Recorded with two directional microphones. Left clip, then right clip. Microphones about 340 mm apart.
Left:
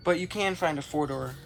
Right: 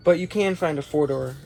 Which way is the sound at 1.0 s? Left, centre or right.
Centre.